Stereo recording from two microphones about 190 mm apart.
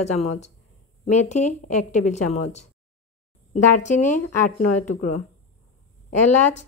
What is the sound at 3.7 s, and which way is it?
Speech, 40° left (ahead or behind).